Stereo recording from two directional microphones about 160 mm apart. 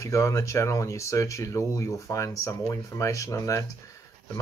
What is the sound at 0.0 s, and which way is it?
Speech, 20° left (ahead or behind).